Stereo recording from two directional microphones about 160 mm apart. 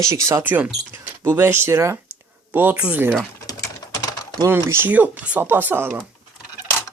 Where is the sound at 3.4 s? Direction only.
20° left (ahead or behind).